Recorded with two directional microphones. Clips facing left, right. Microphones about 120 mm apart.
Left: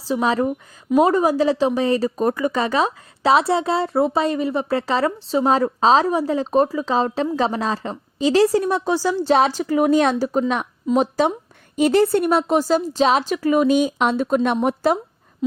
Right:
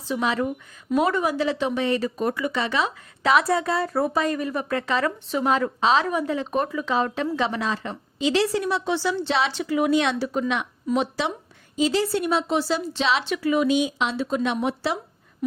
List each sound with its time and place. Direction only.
0.0 s speech: 35° left (ahead or behind)
3.3 s speech: 25° left (ahead or behind)
11.8 s a woman's voice: 55° left (ahead or behind)